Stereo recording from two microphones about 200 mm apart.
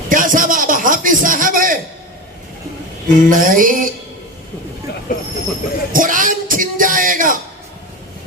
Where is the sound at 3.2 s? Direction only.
40° right (ahead or behind).